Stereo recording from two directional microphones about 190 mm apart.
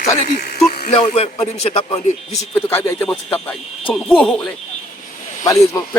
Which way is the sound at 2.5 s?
10° left (ahead or behind).